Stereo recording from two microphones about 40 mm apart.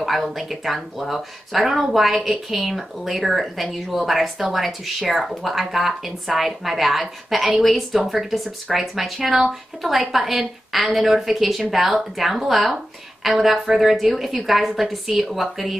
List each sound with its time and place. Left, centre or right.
0.0 s speech: centre